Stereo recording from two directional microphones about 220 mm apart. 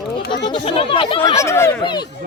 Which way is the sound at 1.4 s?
10° left (ahead or behind).